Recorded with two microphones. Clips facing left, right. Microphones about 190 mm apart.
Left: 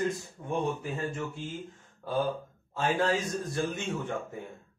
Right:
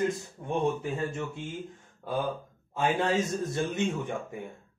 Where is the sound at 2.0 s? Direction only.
15° right (ahead or behind).